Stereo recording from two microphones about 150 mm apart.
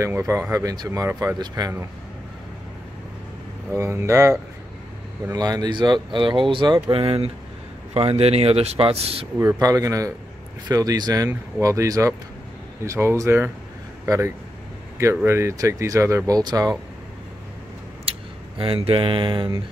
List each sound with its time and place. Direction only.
0.0 s speech: 20° right (ahead or behind)
3.7 s speech: 20° right (ahead or behind); by 9.3 s 40° right (ahead or behind)
9.4 s speech: 20° right (ahead or behind)
18.1 s a sound: 40° right (ahead or behind)
18.6 s speech: 40° right (ahead or behind)